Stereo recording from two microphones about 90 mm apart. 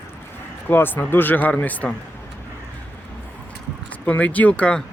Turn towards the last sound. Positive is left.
turn(degrees=15)  # may be behind; listen again after turning